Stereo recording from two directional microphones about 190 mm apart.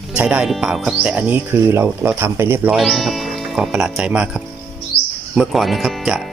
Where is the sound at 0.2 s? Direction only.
5° right (ahead or behind).